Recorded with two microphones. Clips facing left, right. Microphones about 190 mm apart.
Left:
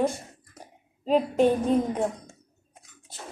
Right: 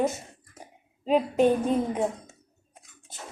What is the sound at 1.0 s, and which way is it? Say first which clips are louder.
Speech: left 1 dB; 5° right (ahead or behind).